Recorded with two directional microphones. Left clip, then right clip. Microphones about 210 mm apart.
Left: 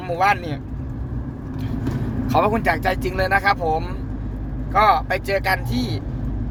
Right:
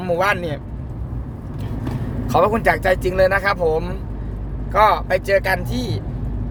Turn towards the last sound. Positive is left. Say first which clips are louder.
# right 1 dB
turn(degrees=-10)  # may be behind; listen again after turning